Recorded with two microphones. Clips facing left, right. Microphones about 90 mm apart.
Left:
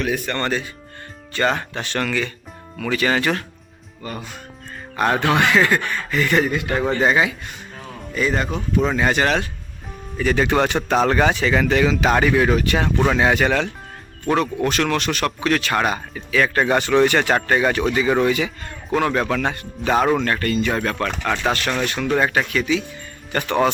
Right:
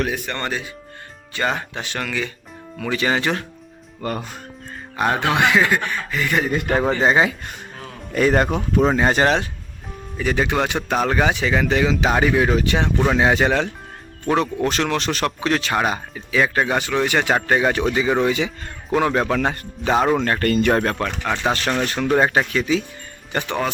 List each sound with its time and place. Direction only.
0.1 s speech: 15° right (ahead or behind)
2.7 s speech: 20° right (ahead or behind)
4.0 s a man's voice: 65° right (ahead or behind)
4.9 s speech: 10° right (ahead or behind)
6.6 s a man's voice: 50° right (ahead or behind)
7.0 s speech: 25° right (ahead or behind)
8.1 s a man's voice: 55° right (ahead or behind)
8.8 s speech: 35° right (ahead or behind)
10.2 s speech: 10° right (ahead or behind); by 19.9 s 30° right (ahead or behind)
19.9 s speech: 5° right (ahead or behind)
20.4 s a man's voice: 55° right (ahead or behind)
21.0 s speech: 10° right (ahead or behind)
21.5 s speech: 25° right (ahead or behind)